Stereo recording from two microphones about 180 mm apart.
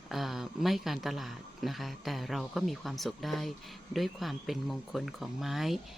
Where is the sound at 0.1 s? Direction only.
Centre (ahead or behind).